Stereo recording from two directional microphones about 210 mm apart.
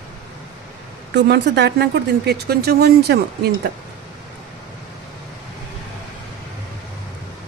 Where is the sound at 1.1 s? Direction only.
55° right (ahead or behind).